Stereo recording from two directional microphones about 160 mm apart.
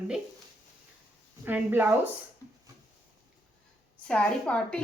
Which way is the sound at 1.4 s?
10° right (ahead or behind).